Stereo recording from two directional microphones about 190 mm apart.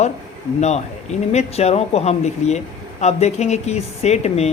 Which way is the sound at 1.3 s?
35° left (ahead or behind).